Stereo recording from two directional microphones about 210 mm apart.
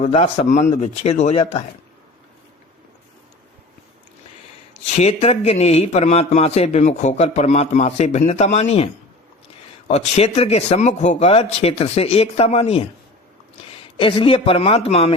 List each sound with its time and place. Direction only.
0.0 s a man's voice: 30° left (ahead or behind)
4.9 s a man's voice: 30° left (ahead or behind)
9.9 s a man's voice: 30° left (ahead or behind)
13.9 s a man's voice: 25° left (ahead or behind)